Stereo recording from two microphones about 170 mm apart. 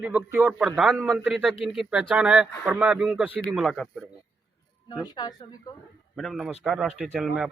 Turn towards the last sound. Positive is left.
turn(degrees=0)  # may be behind; listen again after turning